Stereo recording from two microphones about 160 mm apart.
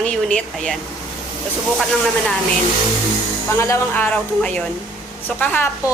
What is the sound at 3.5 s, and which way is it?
A woman's voice, 15° left (ahead or behind).